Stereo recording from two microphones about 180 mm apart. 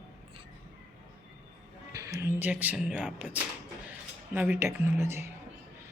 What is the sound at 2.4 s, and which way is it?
Speech, 10° right (ahead or behind).